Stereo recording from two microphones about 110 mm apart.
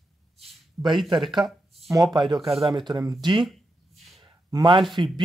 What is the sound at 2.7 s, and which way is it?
Speech, 40° right (ahead or behind).